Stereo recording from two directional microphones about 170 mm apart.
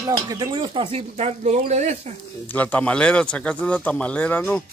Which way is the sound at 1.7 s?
40° right (ahead or behind).